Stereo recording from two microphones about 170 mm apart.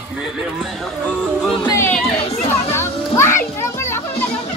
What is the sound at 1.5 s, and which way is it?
Speech, 20° left (ahead or behind).